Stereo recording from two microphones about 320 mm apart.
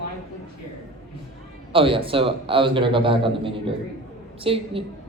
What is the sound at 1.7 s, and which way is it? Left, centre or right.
A woman's voice, centre.